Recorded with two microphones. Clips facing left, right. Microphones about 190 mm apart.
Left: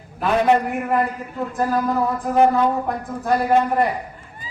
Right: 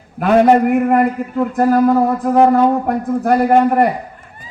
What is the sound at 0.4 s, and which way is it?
A man's voice, 45° right (ahead or behind).